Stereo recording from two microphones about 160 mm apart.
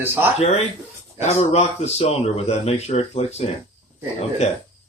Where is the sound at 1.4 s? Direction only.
45° left (ahead or behind).